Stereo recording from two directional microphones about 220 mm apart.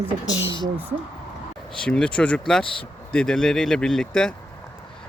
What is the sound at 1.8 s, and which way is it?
Speech, 5° left (ahead or behind).